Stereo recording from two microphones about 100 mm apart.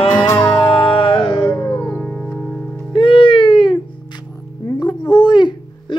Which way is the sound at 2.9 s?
60° left (ahead or behind).